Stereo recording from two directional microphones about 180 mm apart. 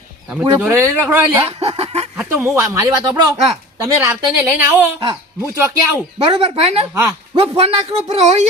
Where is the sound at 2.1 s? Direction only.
10° right (ahead or behind).